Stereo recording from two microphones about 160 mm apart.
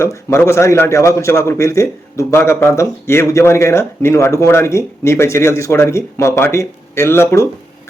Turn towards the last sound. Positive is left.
turn(degrees=15)  # may be behind; listen again after turning